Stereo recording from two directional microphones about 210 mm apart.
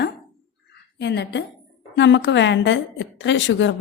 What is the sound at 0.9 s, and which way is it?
A woman's voice, 55° left (ahead or behind).